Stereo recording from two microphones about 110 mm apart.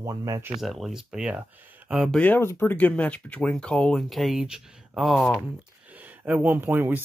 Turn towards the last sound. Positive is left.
turn(degrees=-20)  # may be behind; listen again after turning